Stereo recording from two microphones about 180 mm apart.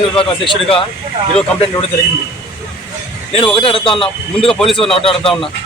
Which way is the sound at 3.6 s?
30° left (ahead or behind).